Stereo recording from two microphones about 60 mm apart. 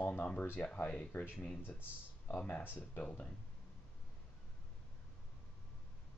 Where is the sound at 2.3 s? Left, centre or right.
Left.